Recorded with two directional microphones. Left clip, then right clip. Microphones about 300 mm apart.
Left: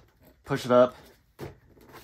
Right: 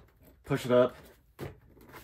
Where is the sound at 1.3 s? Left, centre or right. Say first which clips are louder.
Left 2 dB; centre.